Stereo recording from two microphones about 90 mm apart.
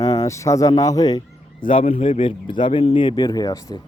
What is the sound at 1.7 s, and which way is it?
Speech, 90° left.